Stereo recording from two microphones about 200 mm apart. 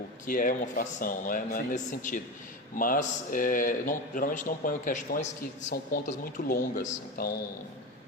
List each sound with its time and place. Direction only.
0.3 s speech: 45° left (ahead or behind)